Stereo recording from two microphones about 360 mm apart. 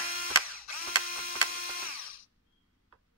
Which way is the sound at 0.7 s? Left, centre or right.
Left.